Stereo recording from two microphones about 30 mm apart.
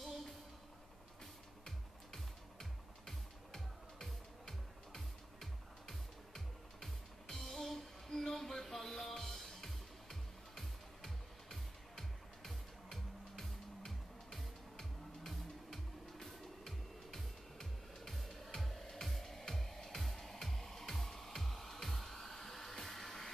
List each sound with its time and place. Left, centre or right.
2.1 s music: centre